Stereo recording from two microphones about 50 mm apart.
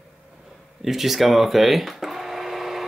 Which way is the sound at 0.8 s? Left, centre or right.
Centre.